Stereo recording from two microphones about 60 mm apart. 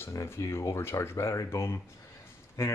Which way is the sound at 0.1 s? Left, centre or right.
Left.